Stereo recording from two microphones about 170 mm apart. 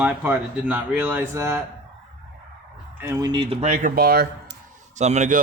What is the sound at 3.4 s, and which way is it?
Speech, 35° right (ahead or behind).